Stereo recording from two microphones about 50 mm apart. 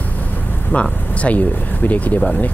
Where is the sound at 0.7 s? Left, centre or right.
Left.